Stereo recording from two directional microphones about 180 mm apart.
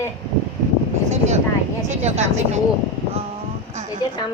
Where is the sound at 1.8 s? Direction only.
40° right (ahead or behind).